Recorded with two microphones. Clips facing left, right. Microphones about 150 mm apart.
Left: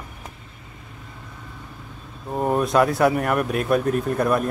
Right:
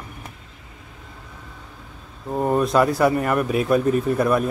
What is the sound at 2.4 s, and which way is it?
Speech, 5° left (ahead or behind).